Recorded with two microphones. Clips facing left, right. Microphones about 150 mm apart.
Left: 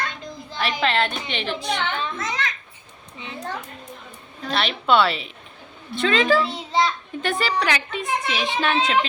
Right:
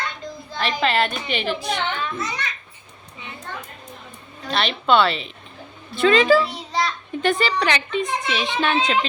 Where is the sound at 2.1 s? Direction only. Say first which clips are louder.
Left 1 dB; 90° left.